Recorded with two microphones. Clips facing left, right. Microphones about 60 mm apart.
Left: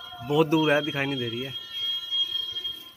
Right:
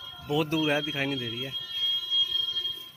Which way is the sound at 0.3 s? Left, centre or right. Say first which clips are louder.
Left 5 dB; centre.